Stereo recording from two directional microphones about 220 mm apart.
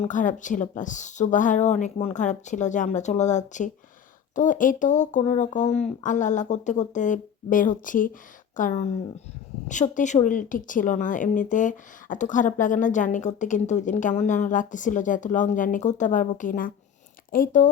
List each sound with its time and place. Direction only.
0.0 s speech: 35° left (ahead or behind)